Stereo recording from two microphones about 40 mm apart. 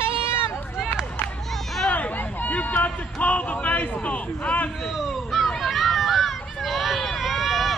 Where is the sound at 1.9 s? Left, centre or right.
Left.